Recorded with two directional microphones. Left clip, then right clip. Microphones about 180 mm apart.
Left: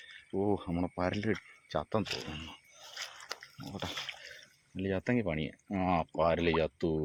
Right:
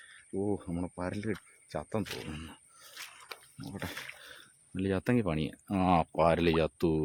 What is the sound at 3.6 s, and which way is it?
Speech, 25° right (ahead or behind).